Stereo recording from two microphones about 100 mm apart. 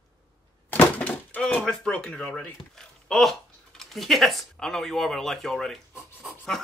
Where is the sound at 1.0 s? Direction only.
15° left (ahead or behind).